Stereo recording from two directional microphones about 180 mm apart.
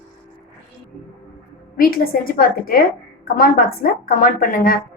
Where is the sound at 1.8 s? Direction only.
55° left (ahead or behind).